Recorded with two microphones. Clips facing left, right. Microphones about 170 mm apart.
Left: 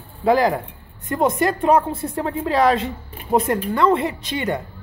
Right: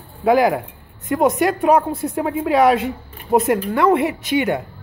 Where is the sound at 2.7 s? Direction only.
15° right (ahead or behind).